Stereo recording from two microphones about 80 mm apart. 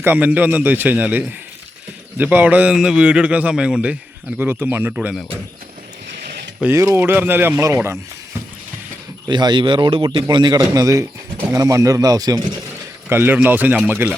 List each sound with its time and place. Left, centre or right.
0.0 s a man's voice: right
4.4 s a man's voice: right
6.6 s speech: centre
6.9 s a man's voice: right
9.2 s speech: right
10.2 s a man's voice: right
10.6 s speech: right
13.1 s a man's voice: right